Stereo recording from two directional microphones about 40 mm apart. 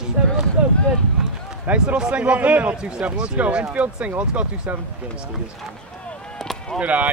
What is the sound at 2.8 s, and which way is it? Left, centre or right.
Speech, right.